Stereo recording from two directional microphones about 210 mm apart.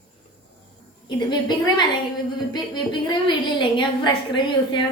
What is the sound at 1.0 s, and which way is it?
A woman's voice, 20° left (ahead or behind).